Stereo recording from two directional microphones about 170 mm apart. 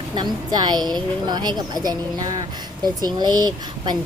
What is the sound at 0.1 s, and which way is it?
Speech, 25° right (ahead or behind).